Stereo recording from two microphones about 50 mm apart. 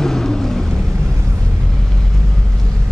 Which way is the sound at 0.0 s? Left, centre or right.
Centre.